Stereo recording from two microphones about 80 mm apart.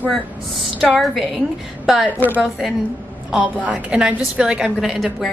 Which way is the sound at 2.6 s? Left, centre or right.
Centre.